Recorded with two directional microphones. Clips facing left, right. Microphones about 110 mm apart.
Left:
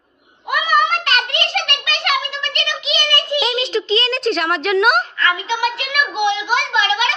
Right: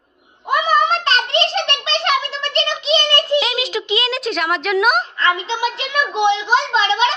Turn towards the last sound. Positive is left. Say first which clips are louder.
# right 2 dB
turn(degrees=-30)  # may be behind; listen again after turning